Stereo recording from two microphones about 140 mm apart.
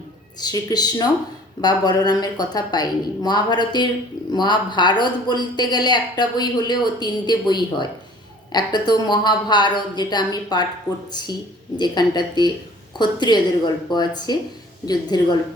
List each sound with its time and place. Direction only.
0.3 s a woman's voice: 30° left (ahead or behind)